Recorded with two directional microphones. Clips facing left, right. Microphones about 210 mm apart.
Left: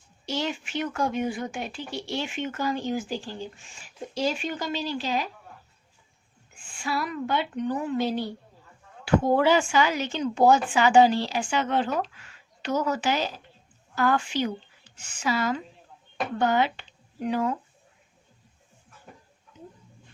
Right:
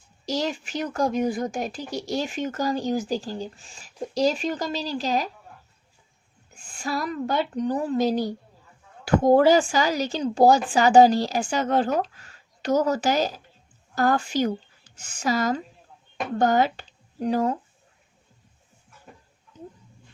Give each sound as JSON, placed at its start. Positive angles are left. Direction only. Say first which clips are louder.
{"t": 0.3, "sound": "speech", "louder": "right 3 dB", "side_deg": -40}
{"t": 6.5, "sound": "speech", "louder": "right 1 dB", "side_deg": -40}